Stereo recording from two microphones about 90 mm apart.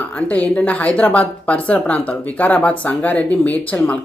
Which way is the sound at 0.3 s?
15° left (ahead or behind).